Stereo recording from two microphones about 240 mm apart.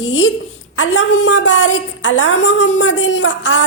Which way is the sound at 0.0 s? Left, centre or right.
Left.